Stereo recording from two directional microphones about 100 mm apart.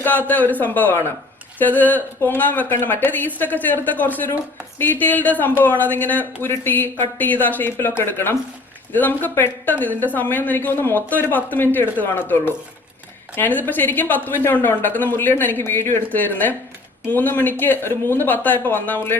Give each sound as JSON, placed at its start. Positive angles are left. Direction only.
{"t": 0.0, "sound": "speech", "side_deg": 20}